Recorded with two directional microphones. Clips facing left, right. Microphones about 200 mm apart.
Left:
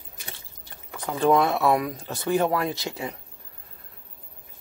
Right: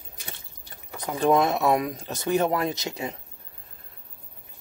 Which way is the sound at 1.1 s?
20° right (ahead or behind).